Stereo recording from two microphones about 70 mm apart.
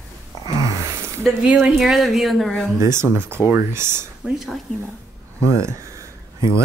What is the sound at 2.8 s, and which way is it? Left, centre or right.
Speech, right.